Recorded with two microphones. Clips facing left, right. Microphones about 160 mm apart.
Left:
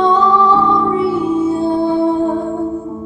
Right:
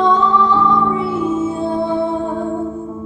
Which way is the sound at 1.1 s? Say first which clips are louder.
Left 3 dB; 35° left (ahead or behind).